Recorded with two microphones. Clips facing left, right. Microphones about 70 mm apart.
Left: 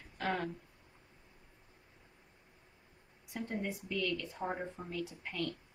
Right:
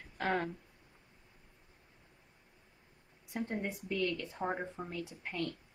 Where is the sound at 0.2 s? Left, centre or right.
Right.